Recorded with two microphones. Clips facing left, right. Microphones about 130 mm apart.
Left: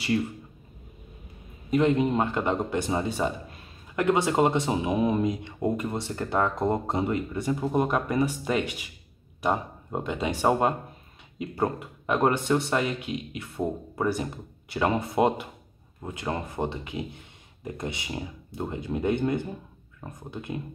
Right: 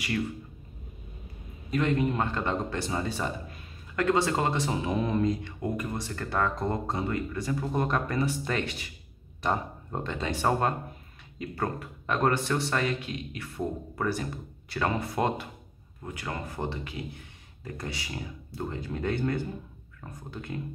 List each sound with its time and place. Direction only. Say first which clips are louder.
1.7 s speech: left 4 dB; 20° left (ahead or behind)